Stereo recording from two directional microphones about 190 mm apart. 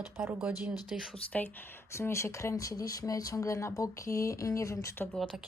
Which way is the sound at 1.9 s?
15° left (ahead or behind).